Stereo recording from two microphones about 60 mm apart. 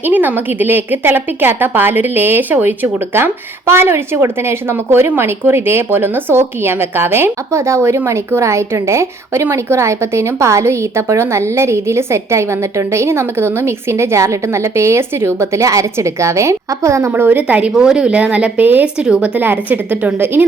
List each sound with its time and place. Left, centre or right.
0.0 s a woman's voice: right
17.1 s speech: right
17.7 s speech: centre; by 18.9 s right
18.9 s speech: centre
19.4 s a woman's voice: right